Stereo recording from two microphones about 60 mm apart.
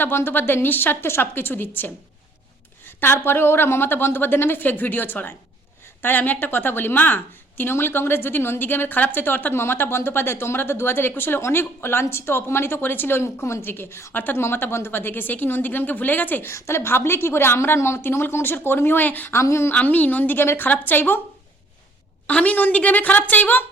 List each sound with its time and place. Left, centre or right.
0.0 s a woman's voice: left
16.5 s a woman's voice: left
19.3 s a woman's voice: left
19.7 s a woman's voice: left
22.3 s a woman's voice: left